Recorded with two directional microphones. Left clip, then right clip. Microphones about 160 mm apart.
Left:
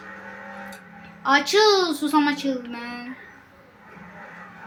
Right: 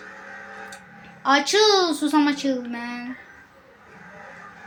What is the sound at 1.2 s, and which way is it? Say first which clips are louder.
A woman's voice: even; 20° right (ahead or behind).